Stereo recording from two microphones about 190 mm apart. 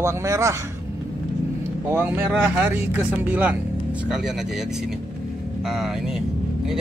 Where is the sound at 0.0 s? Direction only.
15° right (ahead or behind).